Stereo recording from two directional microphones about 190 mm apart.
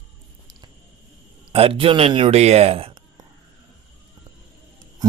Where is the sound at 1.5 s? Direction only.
30° right (ahead or behind).